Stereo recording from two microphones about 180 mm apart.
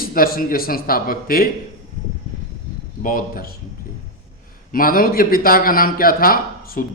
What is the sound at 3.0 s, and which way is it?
Speech, 50° left (ahead or behind).